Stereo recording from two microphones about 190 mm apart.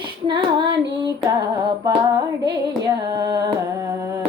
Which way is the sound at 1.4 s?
20° right (ahead or behind).